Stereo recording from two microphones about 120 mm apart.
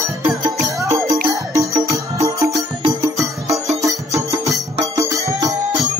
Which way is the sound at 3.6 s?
25° right (ahead or behind).